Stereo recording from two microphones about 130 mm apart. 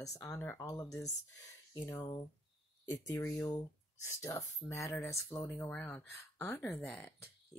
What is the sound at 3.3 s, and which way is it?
Speech, 15° left (ahead or behind).